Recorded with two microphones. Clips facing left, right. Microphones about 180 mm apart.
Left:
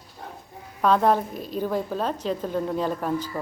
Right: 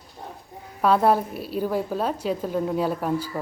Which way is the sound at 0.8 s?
5° right (ahead or behind).